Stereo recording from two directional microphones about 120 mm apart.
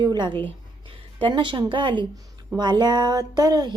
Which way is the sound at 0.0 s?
40° right (ahead or behind).